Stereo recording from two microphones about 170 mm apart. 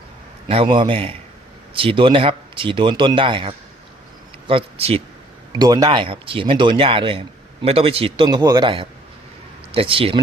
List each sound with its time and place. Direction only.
0.4 s speech: 30° right (ahead or behind)
5.5 s speech: 25° right (ahead or behind)